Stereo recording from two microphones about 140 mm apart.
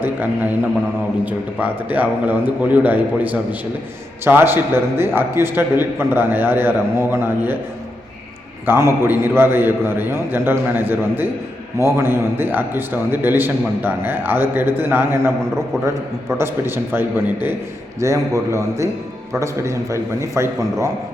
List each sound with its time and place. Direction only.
0.0 s a man's voice: 15° right (ahead or behind)
8.6 s a man's voice: 15° right (ahead or behind)
16.4 s a man's voice: 15° right (ahead or behind)